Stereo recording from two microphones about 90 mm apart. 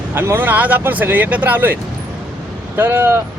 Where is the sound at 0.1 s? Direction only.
25° right (ahead or behind).